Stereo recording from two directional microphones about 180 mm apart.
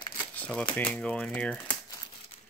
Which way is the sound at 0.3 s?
5° left (ahead or behind).